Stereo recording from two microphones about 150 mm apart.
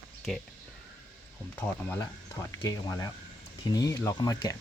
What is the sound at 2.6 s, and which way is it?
Speech, 20° left (ahead or behind).